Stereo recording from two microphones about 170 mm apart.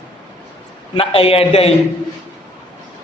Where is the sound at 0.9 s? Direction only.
35° left (ahead or behind).